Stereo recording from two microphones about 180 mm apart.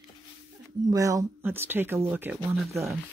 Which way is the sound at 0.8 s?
20° right (ahead or behind).